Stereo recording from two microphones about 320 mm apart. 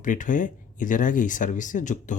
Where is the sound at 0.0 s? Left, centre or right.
Left.